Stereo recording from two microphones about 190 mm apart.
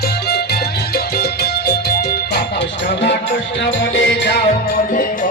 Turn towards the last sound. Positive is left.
turn(degrees=65)  # may be behind; listen again after turning